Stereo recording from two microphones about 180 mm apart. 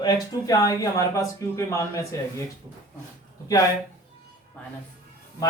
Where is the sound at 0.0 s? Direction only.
20° left (ahead or behind).